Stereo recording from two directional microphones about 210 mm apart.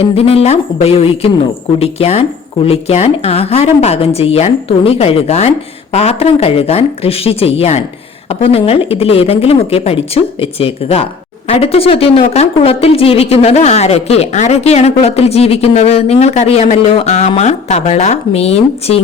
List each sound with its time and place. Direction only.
0.0 s a woman's voice: 25° left (ahead or behind)